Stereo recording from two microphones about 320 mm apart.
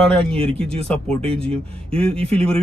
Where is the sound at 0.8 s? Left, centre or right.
Centre.